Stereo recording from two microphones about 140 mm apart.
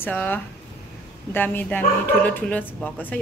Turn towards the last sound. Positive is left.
turn(degrees=10)  # may be behind; listen again after turning